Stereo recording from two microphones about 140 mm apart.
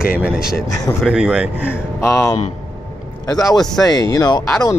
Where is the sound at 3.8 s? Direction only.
25° left (ahead or behind).